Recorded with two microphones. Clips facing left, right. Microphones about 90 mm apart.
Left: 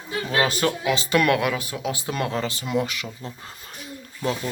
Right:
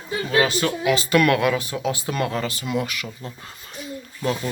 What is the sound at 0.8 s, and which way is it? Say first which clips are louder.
Speech: right 5 dB; 25° left (ahead or behind).